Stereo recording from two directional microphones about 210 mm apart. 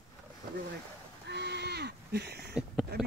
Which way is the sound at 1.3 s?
55° right (ahead or behind).